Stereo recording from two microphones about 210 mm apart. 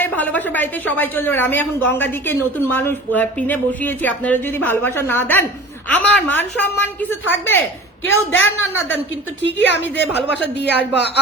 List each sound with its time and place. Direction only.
0.0 s a woman's voice: 10° left (ahead or behind)
9.4 s a woman's voice: 55° left (ahead or behind)